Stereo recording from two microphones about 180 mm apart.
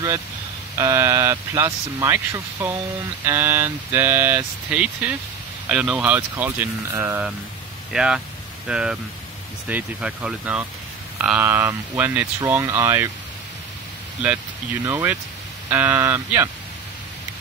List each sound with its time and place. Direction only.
0.7 s speech: 15° right (ahead or behind)
14.9 s speech: 10° right (ahead or behind)